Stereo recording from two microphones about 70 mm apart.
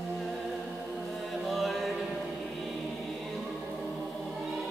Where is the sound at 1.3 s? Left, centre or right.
Centre.